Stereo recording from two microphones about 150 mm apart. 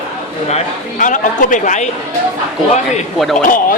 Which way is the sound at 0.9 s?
60° left (ahead or behind).